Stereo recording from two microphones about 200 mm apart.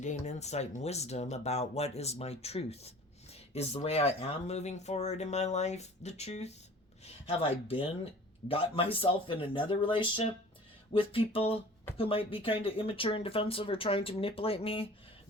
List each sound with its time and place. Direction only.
0.0 s speech: 35° left (ahead or behind)